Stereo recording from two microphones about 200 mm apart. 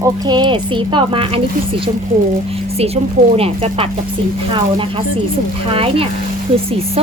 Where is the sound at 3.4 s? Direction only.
30° right (ahead or behind).